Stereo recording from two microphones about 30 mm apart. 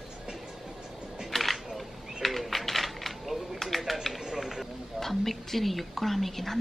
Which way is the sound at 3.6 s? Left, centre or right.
Centre.